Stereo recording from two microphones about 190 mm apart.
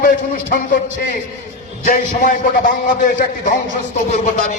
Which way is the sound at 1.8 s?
45° left (ahead or behind).